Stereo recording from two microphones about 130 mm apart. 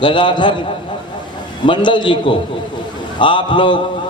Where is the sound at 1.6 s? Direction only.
40° left (ahead or behind).